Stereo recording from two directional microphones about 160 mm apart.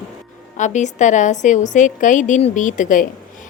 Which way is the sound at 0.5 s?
50° left (ahead or behind).